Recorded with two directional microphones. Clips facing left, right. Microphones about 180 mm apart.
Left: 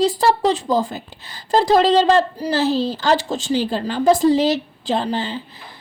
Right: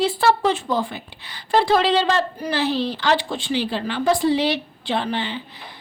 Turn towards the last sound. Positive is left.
turn(degrees=40)  # may be behind; listen again after turning